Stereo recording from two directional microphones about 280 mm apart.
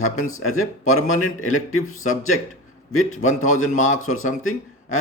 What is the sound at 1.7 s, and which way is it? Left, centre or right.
Speech, left.